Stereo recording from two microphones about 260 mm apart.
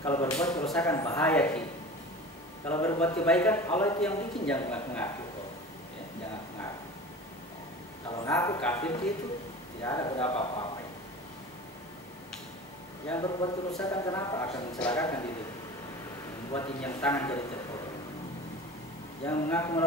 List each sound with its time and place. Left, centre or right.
0.0 s a man's voice: centre
2.7 s a man's voice: centre
8.3 s a man's voice: centre
13.1 s a man's voice: centre
16.5 s a man's voice: centre
19.2 s a man's voice: centre